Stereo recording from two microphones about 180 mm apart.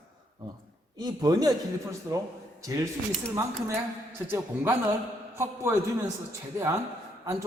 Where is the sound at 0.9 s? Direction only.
20° right (ahead or behind).